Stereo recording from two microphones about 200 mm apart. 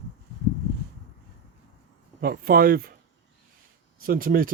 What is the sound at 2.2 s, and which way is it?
Speech, 50° right (ahead or behind).